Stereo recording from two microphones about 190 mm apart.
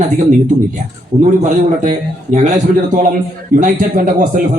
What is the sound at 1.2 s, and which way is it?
Speech, 40° right (ahead or behind).